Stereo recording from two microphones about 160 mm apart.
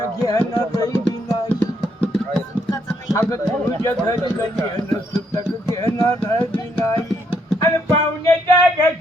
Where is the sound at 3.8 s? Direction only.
15° left (ahead or behind).